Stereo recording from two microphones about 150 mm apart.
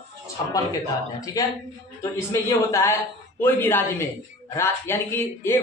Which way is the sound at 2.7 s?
15° left (ahead or behind).